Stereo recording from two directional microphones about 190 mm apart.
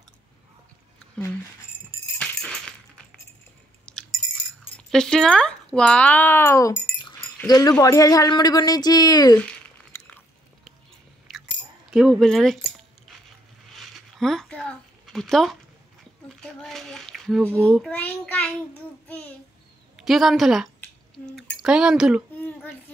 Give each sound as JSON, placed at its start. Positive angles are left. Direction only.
{"t": 2.1, "sound": "music", "side_deg": 5}
{"t": 3.9, "sound": "a sound", "side_deg": 5}
{"t": 4.7, "sound": "speech", "side_deg": 5}
{"t": 11.9, "sound": "speech", "side_deg": 0}
{"t": 13.7, "sound": "a sound", "side_deg": 0}
{"t": 16.3, "sound": "child singing", "side_deg": 0}
{"t": 17.6, "sound": "a child's voice", "side_deg": 0}
{"t": 20.0, "sound": "speech", "side_deg": 0}